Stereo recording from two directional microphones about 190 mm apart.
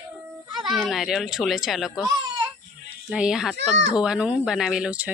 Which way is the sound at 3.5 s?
65° right (ahead or behind).